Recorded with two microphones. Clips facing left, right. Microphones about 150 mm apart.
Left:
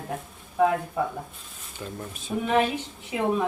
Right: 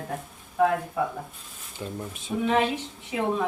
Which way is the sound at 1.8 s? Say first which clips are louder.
Right 2 dB; 20° right (ahead or behind).